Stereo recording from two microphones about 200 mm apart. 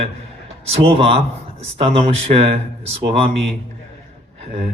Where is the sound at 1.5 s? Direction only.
30° right (ahead or behind).